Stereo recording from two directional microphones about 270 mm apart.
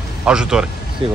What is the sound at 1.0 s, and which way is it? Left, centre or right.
Speech, centre.